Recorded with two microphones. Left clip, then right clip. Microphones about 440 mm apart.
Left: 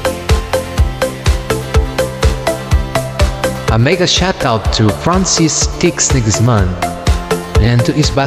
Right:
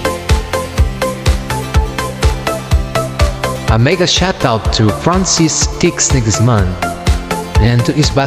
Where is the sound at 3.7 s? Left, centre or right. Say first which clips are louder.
Even; centre.